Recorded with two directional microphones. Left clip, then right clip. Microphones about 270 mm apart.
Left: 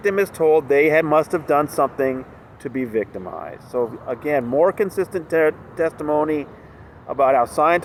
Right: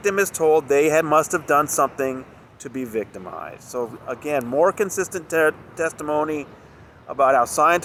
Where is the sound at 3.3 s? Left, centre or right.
Right.